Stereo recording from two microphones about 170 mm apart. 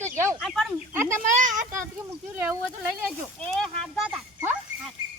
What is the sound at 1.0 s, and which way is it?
Speech, 50° right (ahead or behind).